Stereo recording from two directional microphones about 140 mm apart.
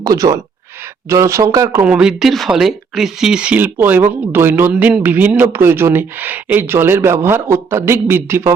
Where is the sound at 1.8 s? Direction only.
5° right (ahead or behind).